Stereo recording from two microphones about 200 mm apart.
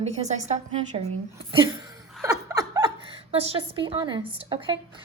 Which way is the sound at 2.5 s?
20° right (ahead or behind).